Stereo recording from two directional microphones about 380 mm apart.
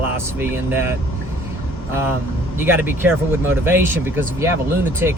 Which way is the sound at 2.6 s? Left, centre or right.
Centre.